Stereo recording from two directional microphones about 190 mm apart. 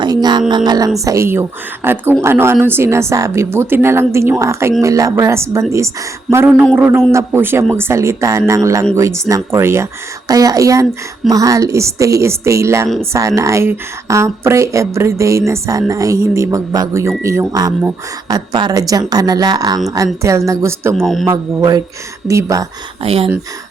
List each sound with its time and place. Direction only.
0.0 s speech: 20° right (ahead or behind)
20.9 s speech: centre (ahead or behind)
21.2 s speech: 15° right (ahead or behind)
23.0 s speech: 30° right (ahead or behind)